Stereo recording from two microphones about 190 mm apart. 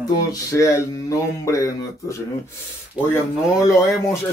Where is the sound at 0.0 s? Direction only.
20° left (ahead or behind).